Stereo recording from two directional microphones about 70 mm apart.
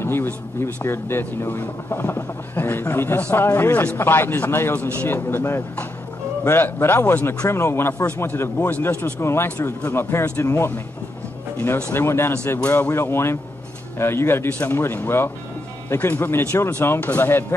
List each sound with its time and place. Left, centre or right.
0.0 s speech: left
4.7 s speech: left
8.5 s speech: left
9.2 s speech: left